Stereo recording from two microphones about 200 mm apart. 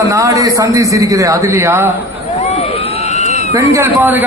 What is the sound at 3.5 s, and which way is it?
Speech, 15° right (ahead or behind).